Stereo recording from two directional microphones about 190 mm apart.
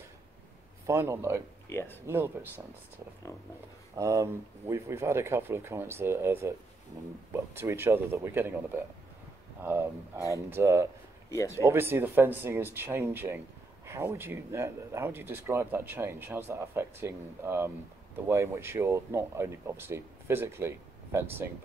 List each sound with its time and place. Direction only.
0.8 s speech: 15° right (ahead or behind)
1.7 s speech: 10° left (ahead or behind)
2.0 s speech: 10° right (ahead or behind)
3.9 s speech: 15° right (ahead or behind)
7.5 s speech: 10° right (ahead or behind)
9.6 s speech: 15° right (ahead or behind)
11.2 s speech: 15° left (ahead or behind)
11.6 s speech: 10° right (ahead or behind)